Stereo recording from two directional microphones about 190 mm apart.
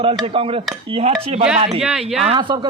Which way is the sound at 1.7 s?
5° right (ahead or behind).